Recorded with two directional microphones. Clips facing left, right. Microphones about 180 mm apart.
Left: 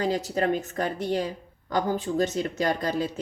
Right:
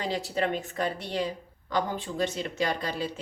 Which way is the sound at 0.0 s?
45° left (ahead or behind).